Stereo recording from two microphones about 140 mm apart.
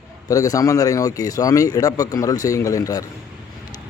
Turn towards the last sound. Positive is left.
turn(degrees=25)  # may be behind; listen again after turning